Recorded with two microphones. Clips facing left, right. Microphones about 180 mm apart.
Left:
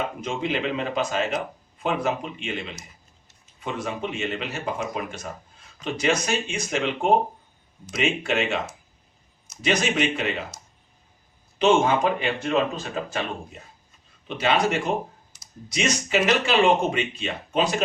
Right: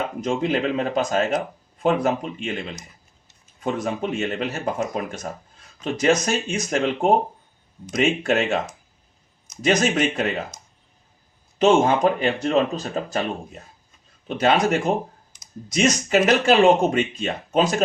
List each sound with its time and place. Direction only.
0.2 s speech: 40° right (ahead or behind)
8.2 s speech: 40° right (ahead or behind)
9.6 s speech: 45° right (ahead or behind)
11.6 s speech: 40° right (ahead or behind)
14.3 s speech: 45° right (ahead or behind)